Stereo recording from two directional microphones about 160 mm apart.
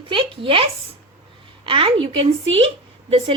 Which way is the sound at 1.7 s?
35° right (ahead or behind).